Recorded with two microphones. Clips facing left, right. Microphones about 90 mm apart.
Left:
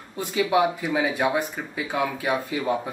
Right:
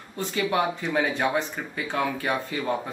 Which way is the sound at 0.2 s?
10° left (ahead or behind).